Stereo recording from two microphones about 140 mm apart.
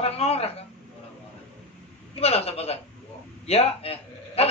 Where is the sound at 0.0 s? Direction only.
45° left (ahead or behind).